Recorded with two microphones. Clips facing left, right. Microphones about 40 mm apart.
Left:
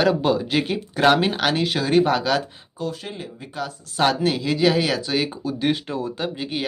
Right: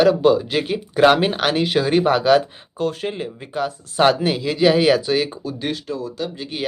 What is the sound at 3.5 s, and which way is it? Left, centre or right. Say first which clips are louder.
Speech: right 6 dB; centre.